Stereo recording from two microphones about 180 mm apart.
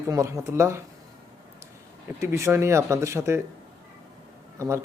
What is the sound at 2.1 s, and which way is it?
Speech, 15° right (ahead or behind).